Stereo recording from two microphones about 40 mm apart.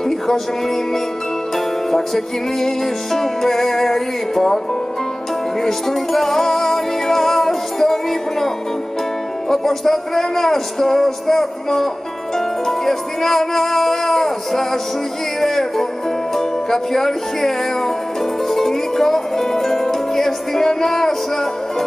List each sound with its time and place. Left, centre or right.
1.9 s music: centre
5.6 s music: centre
9.5 s music: centre